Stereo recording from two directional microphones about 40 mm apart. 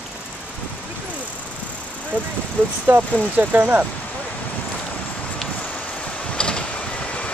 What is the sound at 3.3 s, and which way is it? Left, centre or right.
Speech, right.